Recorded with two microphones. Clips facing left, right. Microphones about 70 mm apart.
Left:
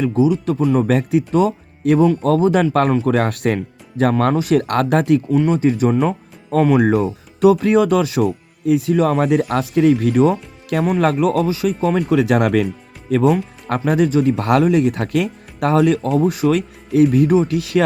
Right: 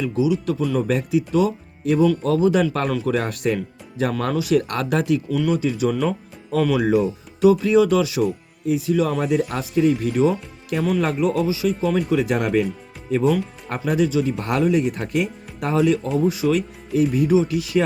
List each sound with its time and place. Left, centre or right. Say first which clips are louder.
0.1 s speech: left 4 dB; left
3.2 s speech: left 4 dB; left
14.3 s speech: left 5 dB; left